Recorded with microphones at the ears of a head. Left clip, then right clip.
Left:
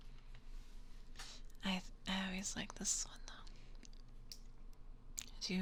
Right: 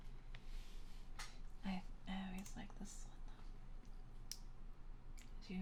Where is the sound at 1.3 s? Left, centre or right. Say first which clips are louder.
Left 11 dB; left.